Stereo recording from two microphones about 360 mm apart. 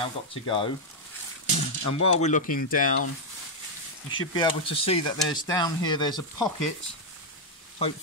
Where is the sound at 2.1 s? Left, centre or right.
Centre.